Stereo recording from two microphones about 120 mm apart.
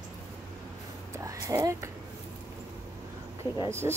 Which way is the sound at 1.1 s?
30° right (ahead or behind).